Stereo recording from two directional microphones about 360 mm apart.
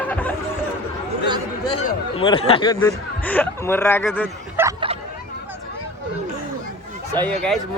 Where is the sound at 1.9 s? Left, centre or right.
Centre.